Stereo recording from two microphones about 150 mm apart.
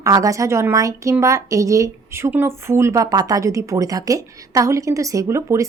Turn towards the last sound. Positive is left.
turn(degrees=-20)  # may be behind; listen again after turning